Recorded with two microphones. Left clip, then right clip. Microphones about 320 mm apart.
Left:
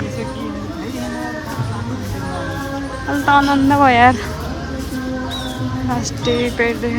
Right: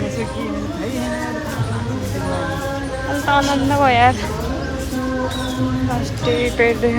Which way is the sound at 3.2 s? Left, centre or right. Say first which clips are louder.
Left 4 dB; centre.